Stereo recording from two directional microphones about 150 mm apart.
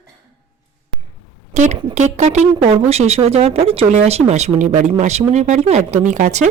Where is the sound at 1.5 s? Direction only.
55° right (ahead or behind).